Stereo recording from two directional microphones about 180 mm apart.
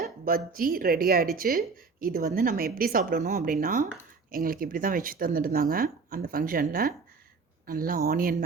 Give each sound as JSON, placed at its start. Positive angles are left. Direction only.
{"t": 0.3, "sound": "speech", "side_deg": -55}